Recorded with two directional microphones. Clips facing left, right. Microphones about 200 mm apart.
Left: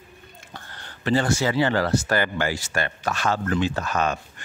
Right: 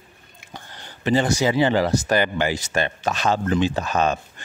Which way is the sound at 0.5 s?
15° right (ahead or behind).